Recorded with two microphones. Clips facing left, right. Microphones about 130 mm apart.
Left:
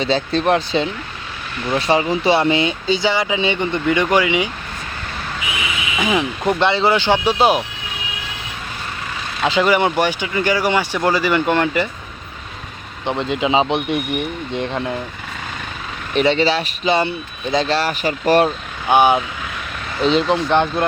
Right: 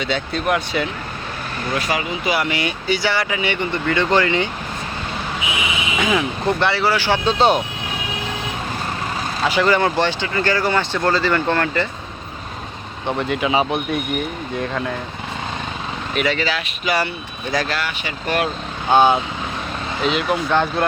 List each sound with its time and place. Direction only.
0.0 s speech: 30° left (ahead or behind); by 4.4 s 10° left (ahead or behind)
6.0 s speech: 15° left (ahead or behind)
9.4 s speech: 20° left (ahead or behind)
13.1 s speech: 20° left (ahead or behind)
16.1 s speech: 30° left (ahead or behind)
18.9 s speech: 15° left (ahead or behind)
20.3 s speech: 20° left (ahead or behind)